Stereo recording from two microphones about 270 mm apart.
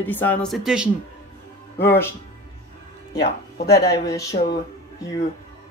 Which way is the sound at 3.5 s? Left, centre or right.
Left.